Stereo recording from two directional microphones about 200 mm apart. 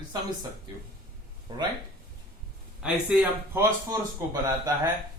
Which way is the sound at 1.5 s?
25° right (ahead or behind).